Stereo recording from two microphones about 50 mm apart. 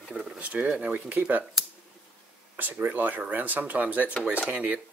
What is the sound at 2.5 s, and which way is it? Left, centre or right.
Speech, right.